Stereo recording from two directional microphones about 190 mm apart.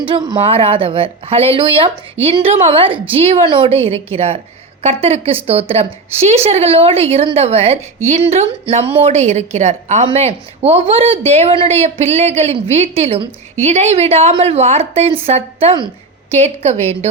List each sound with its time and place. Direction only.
0.1 s a woman's voice: 25° right (ahead or behind)